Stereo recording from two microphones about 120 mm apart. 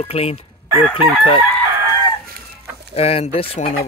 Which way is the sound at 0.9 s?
45° left (ahead or behind).